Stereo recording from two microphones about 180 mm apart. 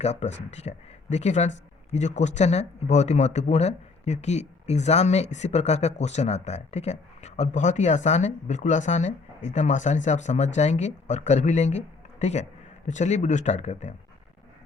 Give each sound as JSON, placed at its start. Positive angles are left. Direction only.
{"t": 0.0, "sound": "speech", "side_deg": 40}